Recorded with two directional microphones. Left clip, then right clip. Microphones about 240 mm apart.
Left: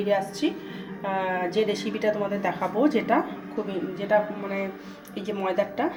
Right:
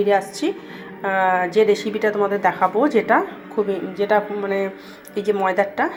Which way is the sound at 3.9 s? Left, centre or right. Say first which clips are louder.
Right 4 dB; right.